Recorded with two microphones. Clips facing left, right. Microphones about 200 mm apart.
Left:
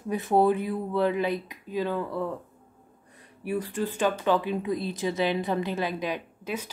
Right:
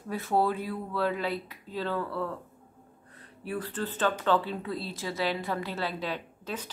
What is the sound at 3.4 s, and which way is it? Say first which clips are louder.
A woman's voice: left 4 dB; 15° left (ahead or behind).